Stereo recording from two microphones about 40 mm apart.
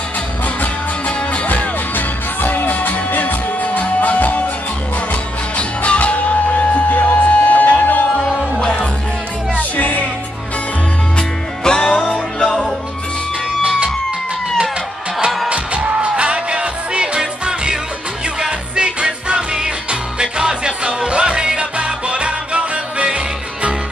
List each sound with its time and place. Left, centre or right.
0.6 s music: left
8.5 s music: left
9.6 s music: left
11.1 s music: centre
13.6 s music: right
15.5 s music: right